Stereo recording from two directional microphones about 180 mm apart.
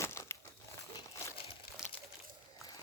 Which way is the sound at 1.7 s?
60° left (ahead or behind).